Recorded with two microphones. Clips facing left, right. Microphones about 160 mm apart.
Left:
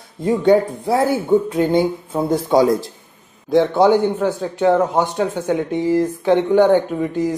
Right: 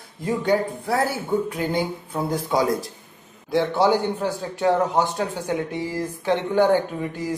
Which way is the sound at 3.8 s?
20° left (ahead or behind).